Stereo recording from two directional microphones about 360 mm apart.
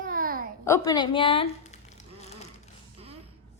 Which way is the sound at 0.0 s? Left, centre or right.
Right.